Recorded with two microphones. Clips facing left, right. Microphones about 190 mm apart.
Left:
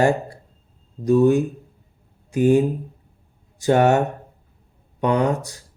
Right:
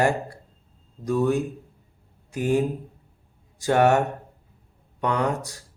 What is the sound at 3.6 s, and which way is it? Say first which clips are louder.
Speech: left 3 dB; 20° left (ahead or behind).